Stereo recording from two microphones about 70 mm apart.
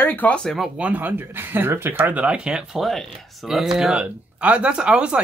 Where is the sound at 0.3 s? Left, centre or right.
Centre.